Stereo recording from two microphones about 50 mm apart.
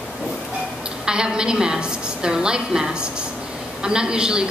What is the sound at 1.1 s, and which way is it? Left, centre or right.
A woman's voice, centre.